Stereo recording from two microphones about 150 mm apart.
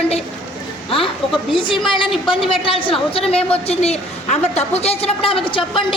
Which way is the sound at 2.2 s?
35° left (ahead or behind).